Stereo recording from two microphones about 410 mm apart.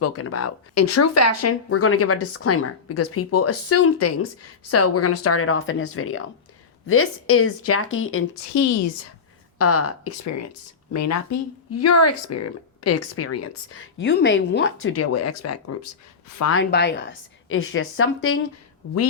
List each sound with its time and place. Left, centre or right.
0.0 s speech: left
8.5 s a woman's voice: left
9.6 s a woman's voice: left